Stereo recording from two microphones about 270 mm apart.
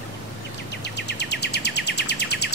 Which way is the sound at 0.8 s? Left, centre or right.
Left.